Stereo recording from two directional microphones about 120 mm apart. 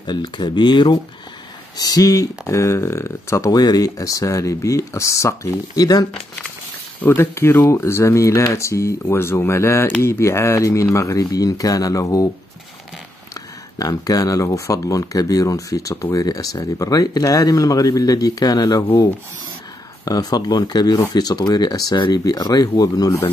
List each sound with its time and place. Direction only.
0.0 s speech: 40° left (ahead or behind)
7.0 s speech: 20° left (ahead or behind)
13.3 s speech: 30° left (ahead or behind)
20.1 s speech: 35° left (ahead or behind)